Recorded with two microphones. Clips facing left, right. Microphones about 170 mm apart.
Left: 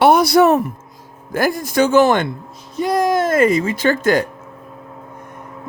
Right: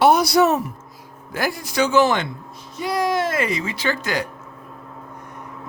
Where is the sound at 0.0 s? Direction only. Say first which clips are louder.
Left 4 dB; 55° left (ahead or behind).